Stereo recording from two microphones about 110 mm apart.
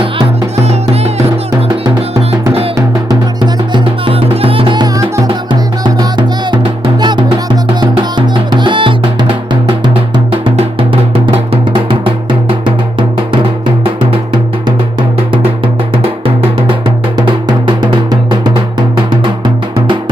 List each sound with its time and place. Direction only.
0.6 s music: 75° right (ahead or behind)
2.7 s music: 40° right (ahead or behind)
4.9 s music: 30° right (ahead or behind)
5.8 s music: 40° right (ahead or behind)
8.4 s music: 45° right (ahead or behind)
10.4 s drum: 50° right (ahead or behind)
15.6 s drum: 60° right (ahead or behind)
17.2 s drum: 45° right (ahead or behind)